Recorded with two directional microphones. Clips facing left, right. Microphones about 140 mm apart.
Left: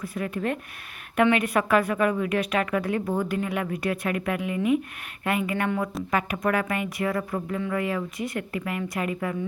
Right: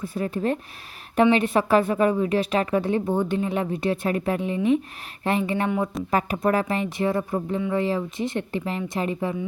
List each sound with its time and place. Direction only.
0.0 s a woman's voice: 30° right (ahead or behind)
5.6 s a woman's voice: 20° right (ahead or behind)
6.1 s a woman's voice: 30° right (ahead or behind)